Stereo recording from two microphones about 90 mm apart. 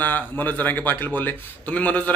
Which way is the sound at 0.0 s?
20° left (ahead or behind).